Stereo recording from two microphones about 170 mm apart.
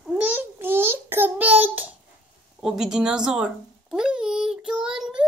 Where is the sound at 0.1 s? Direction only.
10° right (ahead or behind).